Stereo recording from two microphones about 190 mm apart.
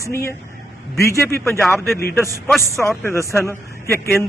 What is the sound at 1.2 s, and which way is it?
Speech, 15° left (ahead or behind).